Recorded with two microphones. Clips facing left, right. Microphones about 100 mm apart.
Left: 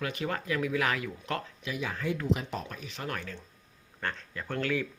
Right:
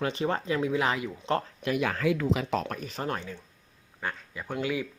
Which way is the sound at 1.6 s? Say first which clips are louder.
Right 7 dB; 60° right (ahead or behind).